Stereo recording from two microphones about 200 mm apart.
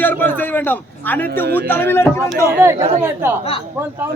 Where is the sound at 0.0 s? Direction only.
10° left (ahead or behind).